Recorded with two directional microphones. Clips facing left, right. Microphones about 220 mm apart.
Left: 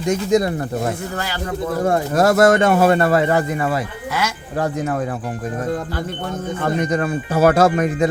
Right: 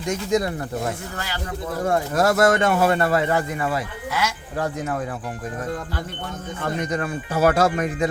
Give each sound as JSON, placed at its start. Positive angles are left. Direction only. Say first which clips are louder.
{"t": 0.0, "sound": "speech", "louder": "left 5 dB", "side_deg": 35}
{"t": 6.6, "sound": "speech", "louder": "left 5 dB", "side_deg": 45}